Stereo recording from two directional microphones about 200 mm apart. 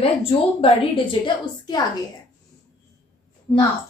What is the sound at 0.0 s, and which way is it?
A woman's voice, 30° left (ahead or behind).